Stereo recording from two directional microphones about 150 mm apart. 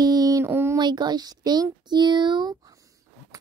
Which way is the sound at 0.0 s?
25° right (ahead or behind).